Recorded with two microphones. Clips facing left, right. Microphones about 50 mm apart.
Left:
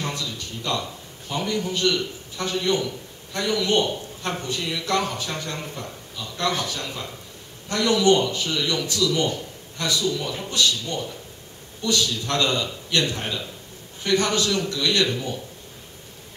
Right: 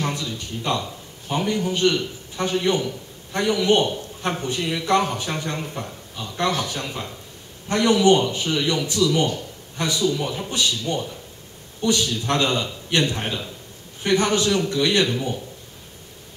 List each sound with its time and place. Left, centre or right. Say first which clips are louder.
0.0 s a sound: right 3 dB; right
1.3 s a man's voice: right 3 dB; right
6.3 s a man's voice: right 2 dB; right